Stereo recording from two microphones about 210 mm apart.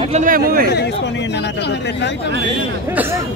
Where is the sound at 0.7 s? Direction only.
55° left (ahead or behind).